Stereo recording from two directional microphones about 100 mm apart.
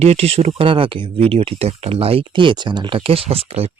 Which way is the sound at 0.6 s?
65° right (ahead or behind).